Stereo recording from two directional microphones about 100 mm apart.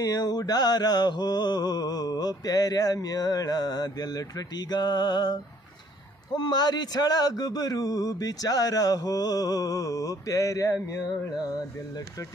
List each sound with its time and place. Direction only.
0.0 s mantra: 40° left (ahead or behind)